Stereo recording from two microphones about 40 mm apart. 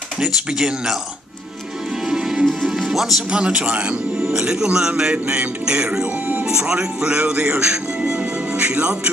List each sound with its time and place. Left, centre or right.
0.3 s speech: centre
2.0 s music: centre
3.3 s speech: right
8.7 s music: right